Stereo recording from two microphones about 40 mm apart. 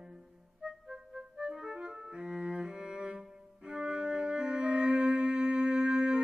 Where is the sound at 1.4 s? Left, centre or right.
Right.